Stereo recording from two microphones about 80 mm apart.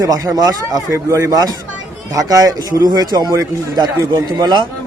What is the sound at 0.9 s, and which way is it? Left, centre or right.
Speech, right.